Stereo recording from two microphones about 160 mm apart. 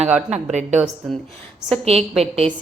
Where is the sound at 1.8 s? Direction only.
40° right (ahead or behind).